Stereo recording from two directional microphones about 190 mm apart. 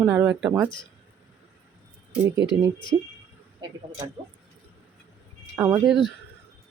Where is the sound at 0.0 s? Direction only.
10° right (ahead or behind).